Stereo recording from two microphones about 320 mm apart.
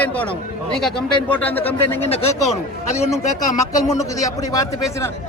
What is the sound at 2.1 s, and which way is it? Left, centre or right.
Speech, centre.